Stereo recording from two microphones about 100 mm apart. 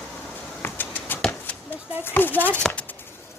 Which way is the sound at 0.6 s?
20° left (ahead or behind).